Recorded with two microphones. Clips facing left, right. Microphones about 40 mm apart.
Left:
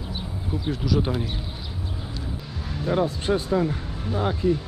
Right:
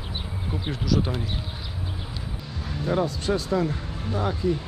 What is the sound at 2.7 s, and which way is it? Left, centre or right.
Speech, centre.